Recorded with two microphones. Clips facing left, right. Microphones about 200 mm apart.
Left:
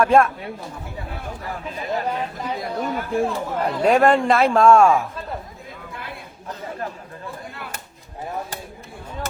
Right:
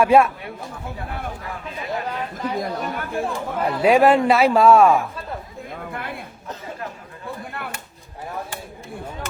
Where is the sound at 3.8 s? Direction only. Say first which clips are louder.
Right 1 dB; 5° right (ahead or behind).